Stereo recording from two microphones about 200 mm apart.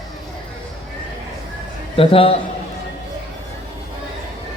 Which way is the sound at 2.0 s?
30° left (ahead or behind).